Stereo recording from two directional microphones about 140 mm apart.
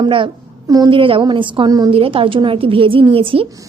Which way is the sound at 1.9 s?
40° right (ahead or behind).